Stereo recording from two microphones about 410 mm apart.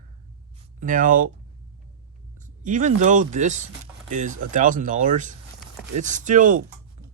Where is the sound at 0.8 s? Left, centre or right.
Centre.